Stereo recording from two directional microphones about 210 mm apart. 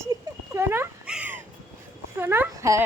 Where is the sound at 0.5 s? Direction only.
10° right (ahead or behind).